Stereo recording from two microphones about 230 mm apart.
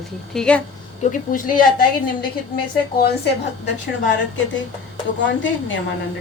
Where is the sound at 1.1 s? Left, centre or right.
Left.